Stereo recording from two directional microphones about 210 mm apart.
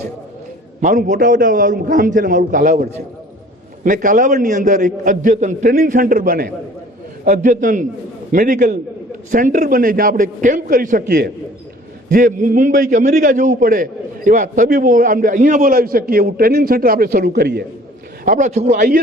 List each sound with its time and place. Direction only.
0.8 s a man's voice: 35° right (ahead or behind)
18.3 s a man's voice: 35° right (ahead or behind)